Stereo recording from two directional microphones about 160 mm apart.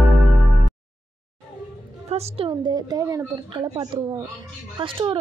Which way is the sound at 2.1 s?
40° right (ahead or behind).